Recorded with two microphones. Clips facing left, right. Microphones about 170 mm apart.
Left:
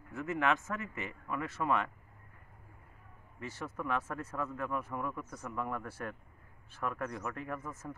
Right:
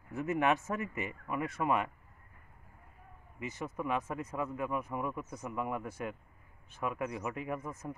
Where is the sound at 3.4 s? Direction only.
10° right (ahead or behind).